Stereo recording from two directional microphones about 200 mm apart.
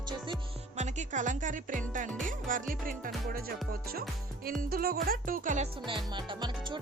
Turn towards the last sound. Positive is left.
turn(degrees=-25)  # may be behind; listen again after turning